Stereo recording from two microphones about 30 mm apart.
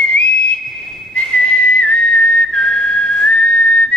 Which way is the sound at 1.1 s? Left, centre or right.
Left.